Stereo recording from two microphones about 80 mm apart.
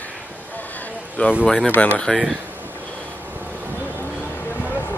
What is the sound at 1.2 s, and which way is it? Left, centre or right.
Speech, centre.